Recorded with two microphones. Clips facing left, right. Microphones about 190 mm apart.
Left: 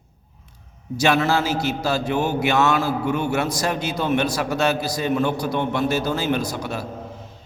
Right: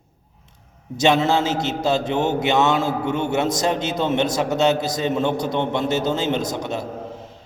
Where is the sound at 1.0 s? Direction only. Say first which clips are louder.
Right 2 dB; 25° right (ahead or behind).